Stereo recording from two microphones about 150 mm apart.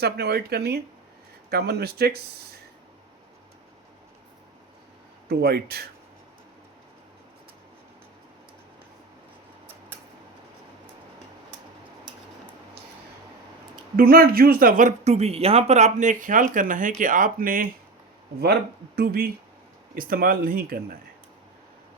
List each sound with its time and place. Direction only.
0.0 s speech: 90° right
5.3 s speech: 90° right
13.9 s speech: 80° right
18.9 s speech: 85° right
19.9 s speech: 70° right (ahead or behind)